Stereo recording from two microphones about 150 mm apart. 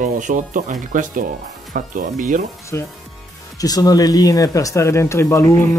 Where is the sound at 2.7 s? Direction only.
20° left (ahead or behind).